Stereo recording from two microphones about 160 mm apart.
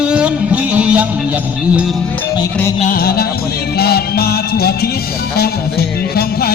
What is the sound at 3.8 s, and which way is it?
Music, 75° left (ahead or behind).